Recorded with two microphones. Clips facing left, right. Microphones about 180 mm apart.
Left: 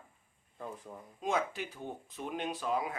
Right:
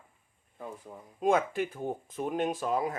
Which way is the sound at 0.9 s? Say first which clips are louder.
Right 1 dB; 15° right (ahead or behind).